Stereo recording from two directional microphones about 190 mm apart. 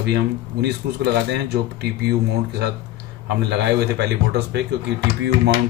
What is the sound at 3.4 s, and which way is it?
Speech, 60° right (ahead or behind).